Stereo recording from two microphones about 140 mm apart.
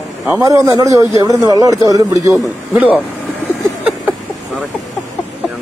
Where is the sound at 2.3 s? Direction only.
5° right (ahead or behind).